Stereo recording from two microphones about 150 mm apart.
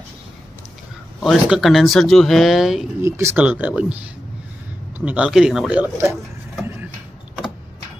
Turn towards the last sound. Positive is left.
turn(degrees=-15)  # may be behind; listen again after turning